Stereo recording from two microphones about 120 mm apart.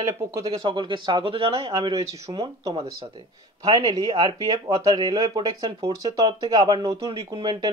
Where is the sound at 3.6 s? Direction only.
30° right (ahead or behind).